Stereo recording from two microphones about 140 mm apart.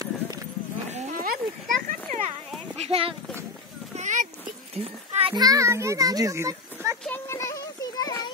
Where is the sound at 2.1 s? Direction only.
70° right (ahead or behind).